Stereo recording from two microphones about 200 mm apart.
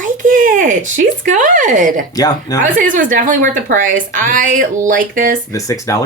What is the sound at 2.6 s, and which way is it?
A woman's voice, 40° right (ahead or behind).